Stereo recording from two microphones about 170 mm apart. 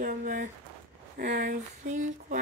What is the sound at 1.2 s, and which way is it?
Speech, 65° right (ahead or behind).